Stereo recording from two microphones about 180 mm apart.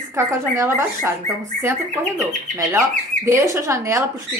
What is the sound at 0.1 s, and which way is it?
Speech, 15° right (ahead or behind).